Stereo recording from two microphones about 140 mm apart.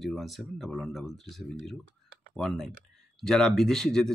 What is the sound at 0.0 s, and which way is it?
Speech, centre (ahead or behind).